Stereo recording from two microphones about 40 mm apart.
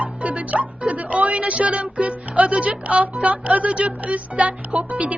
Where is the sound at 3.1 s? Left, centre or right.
Right.